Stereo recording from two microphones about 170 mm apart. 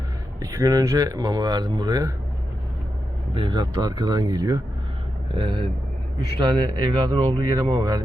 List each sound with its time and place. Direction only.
0.5 s speech: 20° right (ahead or behind)
3.3 s speech: 25° right (ahead or behind)